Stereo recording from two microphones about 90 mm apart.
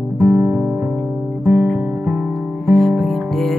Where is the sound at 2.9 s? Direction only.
5° left (ahead or behind).